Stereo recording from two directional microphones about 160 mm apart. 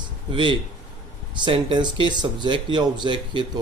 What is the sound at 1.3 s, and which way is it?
A man's voice, 30° right (ahead or behind).